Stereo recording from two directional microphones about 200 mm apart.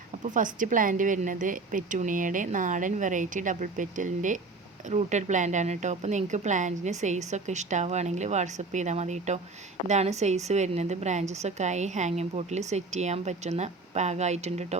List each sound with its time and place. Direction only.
0.2 s a woman's voice: 40° right (ahead or behind)